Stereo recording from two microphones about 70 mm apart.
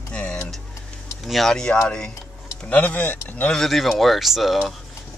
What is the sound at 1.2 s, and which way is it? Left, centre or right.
Speech, centre.